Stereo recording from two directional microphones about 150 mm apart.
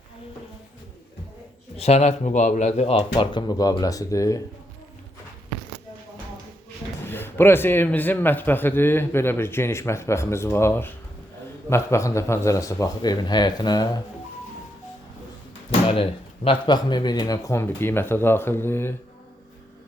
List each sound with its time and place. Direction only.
1.7 s speech: 45° left (ahead or behind); by 4.4 s 20° left (ahead or behind)
7.0 s a man's voice: 15° left (ahead or behind)
15.9 s a man's voice: 40° left (ahead or behind); by 18.9 s 15° left (ahead or behind)